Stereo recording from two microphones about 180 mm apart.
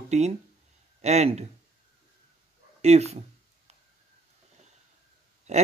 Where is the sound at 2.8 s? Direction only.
35° right (ahead or behind).